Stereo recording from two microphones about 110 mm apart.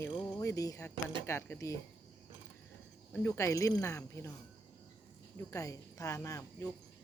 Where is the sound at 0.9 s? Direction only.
45° right (ahead or behind).